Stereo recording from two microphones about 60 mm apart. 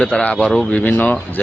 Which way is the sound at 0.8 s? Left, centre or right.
Left.